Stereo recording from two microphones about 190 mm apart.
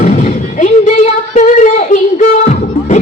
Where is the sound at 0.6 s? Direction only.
40° left (ahead or behind).